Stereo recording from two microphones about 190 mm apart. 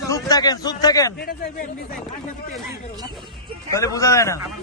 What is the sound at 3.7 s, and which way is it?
Speech, 15° left (ahead or behind).